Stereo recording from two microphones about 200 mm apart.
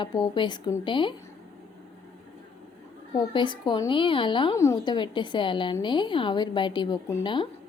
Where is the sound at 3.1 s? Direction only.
25° left (ahead or behind).